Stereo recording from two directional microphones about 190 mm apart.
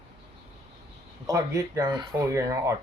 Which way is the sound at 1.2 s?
15° right (ahead or behind).